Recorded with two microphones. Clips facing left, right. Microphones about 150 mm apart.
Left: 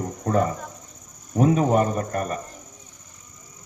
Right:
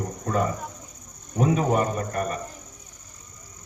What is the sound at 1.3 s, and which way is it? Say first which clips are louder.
A man's voice: left 3 dB; 40° left (ahead or behind).